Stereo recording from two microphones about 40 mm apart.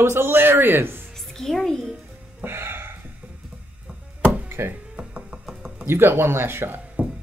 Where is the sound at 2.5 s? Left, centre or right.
Right.